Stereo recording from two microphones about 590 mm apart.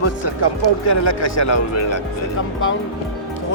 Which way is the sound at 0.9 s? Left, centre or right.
Left.